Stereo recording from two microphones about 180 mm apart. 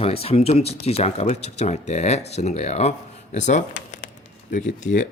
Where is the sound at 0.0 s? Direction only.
35° left (ahead or behind).